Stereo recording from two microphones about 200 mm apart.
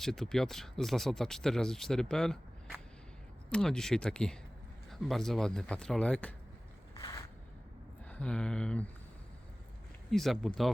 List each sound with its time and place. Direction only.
0.0 s speech: centre (ahead or behind)
7.0 s a sound: 20° left (ahead or behind)
8.0 s speech: 5° left (ahead or behind)
10.1 s speech: centre (ahead or behind)